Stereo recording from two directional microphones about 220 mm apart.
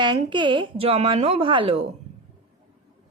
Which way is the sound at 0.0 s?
20° right (ahead or behind).